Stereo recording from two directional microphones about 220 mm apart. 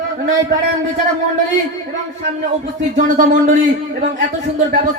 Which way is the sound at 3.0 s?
35° right (ahead or behind).